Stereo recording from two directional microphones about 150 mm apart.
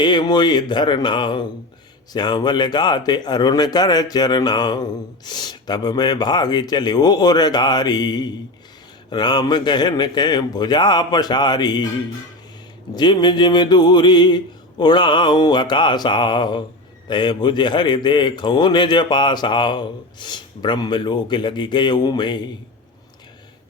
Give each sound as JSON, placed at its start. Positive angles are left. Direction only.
{"t": 0.0, "sound": "a man's voice", "side_deg": 30}
{"t": 12.9, "sound": "a man's voice", "side_deg": 30}